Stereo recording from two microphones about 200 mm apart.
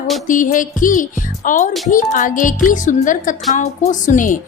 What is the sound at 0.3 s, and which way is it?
Speech, 40° left (ahead or behind).